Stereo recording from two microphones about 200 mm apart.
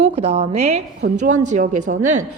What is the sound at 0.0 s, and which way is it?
A woman's voice, 30° right (ahead or behind).